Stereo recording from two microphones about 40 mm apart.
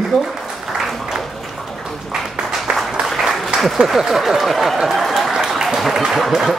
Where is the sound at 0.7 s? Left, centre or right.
Centre.